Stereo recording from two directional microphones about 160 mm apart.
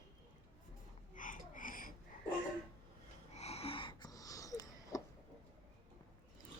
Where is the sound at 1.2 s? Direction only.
55° left (ahead or behind).